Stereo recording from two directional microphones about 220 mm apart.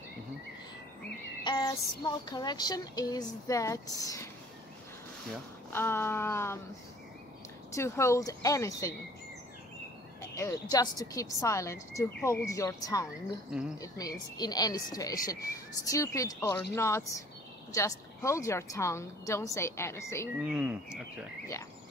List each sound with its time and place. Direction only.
1.4 s speech: 20° left (ahead or behind)
5.7 s speech: 10° left (ahead or behind)
7.7 s speech: 10° left (ahead or behind)
10.3 s speech: 15° left (ahead or behind)
20.3 s speech: 5° right (ahead or behind)